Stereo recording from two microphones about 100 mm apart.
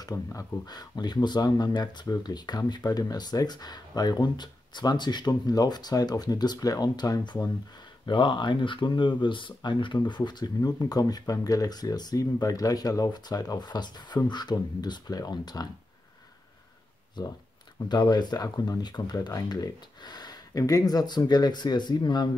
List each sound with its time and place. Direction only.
0.0 s speech: 35° left (ahead or behind)
8.1 s speech: 50° left (ahead or behind)
17.2 s speech: 45° left (ahead or behind)